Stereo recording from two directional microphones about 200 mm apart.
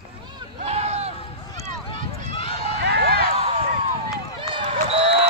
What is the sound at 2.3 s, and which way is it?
Run, 30° left (ahead or behind).